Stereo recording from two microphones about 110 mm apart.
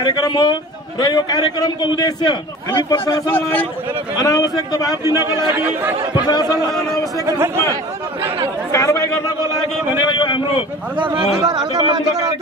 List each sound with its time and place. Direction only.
0.0 s a man's voice: 40° left (ahead or behind)
3.3 s a man's voice: 20° left (ahead or behind)
4.2 s a man's voice: 35° left (ahead or behind)
5.0 s speech: 25° right (ahead or behind)
6.2 s a man's voice: 40° left (ahead or behind)
7.2 s speech: 25° right (ahead or behind)
8.7 s a sound: 30° left (ahead or behind)
10.1 s a sound: 50° left (ahead or behind)
11.4 s a man's voice: 35° right (ahead or behind)